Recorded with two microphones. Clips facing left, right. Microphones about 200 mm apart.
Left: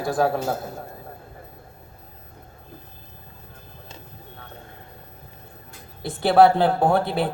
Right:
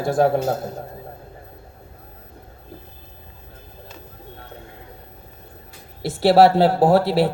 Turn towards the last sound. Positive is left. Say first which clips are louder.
# right 5 dB
turn(degrees=-90)